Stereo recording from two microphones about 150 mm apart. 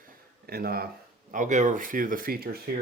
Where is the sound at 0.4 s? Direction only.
90° right.